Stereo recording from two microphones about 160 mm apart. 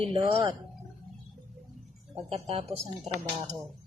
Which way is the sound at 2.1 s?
40° right (ahead or behind).